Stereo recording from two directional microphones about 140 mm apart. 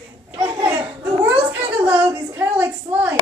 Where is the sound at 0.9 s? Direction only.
10° right (ahead or behind).